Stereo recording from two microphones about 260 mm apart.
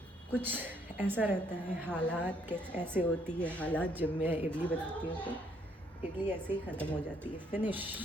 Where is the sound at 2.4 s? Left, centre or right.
Centre.